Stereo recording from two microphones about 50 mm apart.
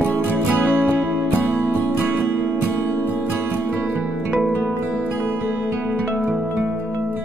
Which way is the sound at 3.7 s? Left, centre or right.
Right.